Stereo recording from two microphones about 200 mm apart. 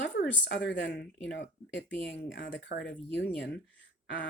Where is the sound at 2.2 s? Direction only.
50° left (ahead or behind).